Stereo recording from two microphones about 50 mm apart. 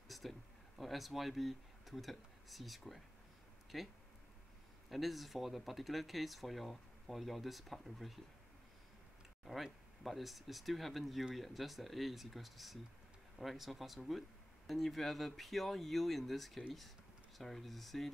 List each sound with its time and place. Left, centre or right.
0.1 s speech: centre
9.4 s speech: centre